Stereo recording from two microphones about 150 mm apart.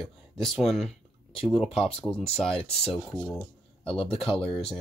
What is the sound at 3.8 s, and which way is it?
Speech, 40° left (ahead or behind).